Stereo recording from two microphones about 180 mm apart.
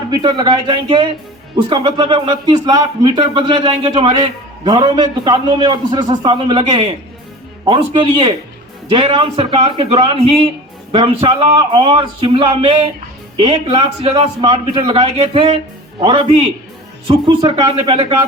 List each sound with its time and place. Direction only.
0.1 s a man's voice: 25° right (ahead or behind)